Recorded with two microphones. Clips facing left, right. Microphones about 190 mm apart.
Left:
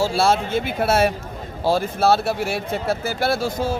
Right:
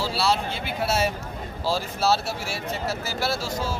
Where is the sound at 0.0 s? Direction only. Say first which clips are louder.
Left 6 dB; 50° left (ahead or behind).